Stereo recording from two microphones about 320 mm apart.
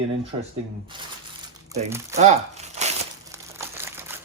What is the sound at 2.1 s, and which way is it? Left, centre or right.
Crumpling, right.